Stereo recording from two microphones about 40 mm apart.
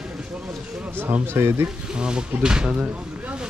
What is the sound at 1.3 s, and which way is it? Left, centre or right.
Speech, right.